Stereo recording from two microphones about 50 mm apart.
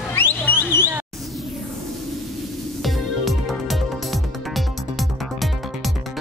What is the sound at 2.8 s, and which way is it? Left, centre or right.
Music, centre.